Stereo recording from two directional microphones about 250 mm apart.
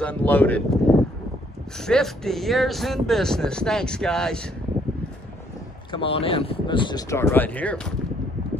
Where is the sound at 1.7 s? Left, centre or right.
Centre.